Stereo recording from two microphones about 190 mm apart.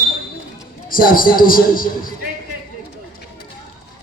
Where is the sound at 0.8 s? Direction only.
50° left (ahead or behind).